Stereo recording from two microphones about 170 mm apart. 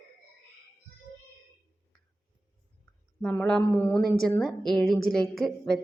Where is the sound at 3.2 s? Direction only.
5° left (ahead or behind).